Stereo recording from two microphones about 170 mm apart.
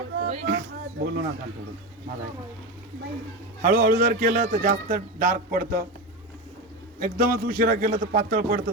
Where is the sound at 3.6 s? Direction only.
45° right (ahead or behind).